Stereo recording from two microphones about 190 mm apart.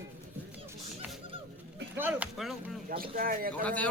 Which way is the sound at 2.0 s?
10° right (ahead or behind).